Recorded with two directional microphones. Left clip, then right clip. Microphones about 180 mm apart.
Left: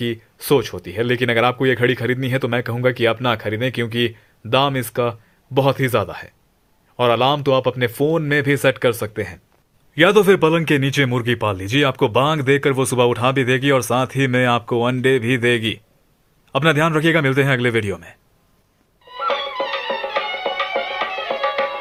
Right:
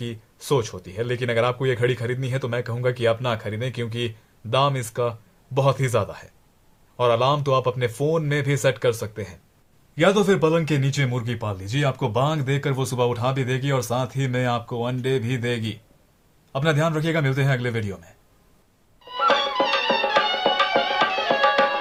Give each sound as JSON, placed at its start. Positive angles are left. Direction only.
{"t": 0.0, "sound": "speech", "side_deg": 30}
{"t": 9.9, "sound": "a man's voice", "side_deg": 50}
{"t": 19.0, "sound": "music", "side_deg": -30}